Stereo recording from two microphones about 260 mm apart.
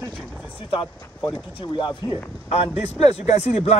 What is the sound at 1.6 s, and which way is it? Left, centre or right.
Speech, centre.